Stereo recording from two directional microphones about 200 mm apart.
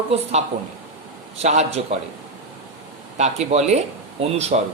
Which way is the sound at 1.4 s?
30° right (ahead or behind).